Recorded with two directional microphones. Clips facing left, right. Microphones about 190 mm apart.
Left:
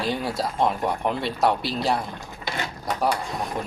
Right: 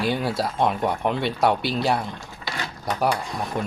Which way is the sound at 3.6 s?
Centre (ahead or behind).